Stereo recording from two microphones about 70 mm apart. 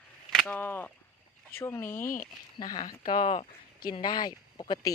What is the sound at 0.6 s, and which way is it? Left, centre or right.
Speech, left.